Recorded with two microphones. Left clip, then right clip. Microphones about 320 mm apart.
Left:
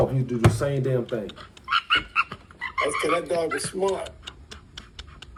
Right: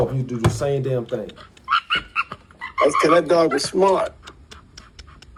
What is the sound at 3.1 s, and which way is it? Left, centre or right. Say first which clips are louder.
Speech: right 9 dB; right.